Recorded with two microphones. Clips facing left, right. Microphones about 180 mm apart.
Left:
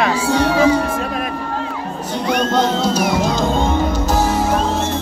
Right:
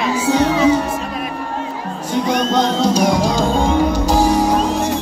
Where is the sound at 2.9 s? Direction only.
5° left (ahead or behind).